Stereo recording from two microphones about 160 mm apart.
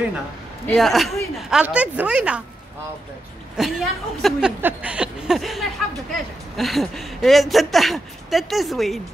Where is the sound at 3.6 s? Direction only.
5° right (ahead or behind).